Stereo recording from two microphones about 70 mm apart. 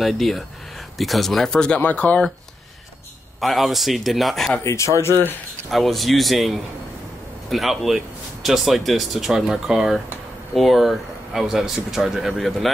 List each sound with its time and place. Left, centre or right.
0.0 s a man's voice: centre
1.8 s speech: left
3.3 s a man's voice: centre
4.6 s speech: left
5.7 s a man's voice: centre